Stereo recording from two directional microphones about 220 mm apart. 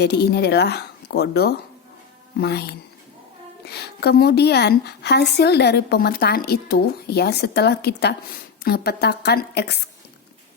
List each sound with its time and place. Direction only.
0.0 s a woman's voice: 50° left (ahead or behind)